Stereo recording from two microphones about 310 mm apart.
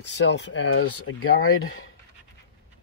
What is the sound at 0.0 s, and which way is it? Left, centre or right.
Speech, left.